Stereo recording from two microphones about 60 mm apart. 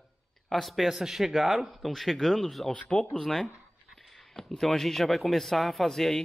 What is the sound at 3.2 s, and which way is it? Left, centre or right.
Speech, centre.